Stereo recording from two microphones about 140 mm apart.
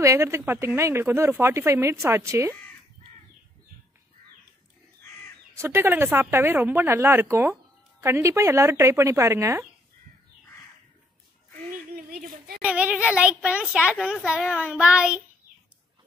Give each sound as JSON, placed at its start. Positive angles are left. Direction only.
{"t": 0.0, "sound": "speech", "side_deg": -20}
{"t": 5.6, "sound": "a child's voice", "side_deg": -15}
{"t": 11.7, "sound": "a sound", "side_deg": -85}
{"t": 12.6, "sound": "a child's voice", "side_deg": -10}